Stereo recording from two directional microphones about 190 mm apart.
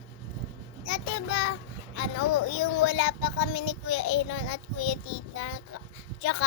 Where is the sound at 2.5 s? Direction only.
75° left (ahead or behind).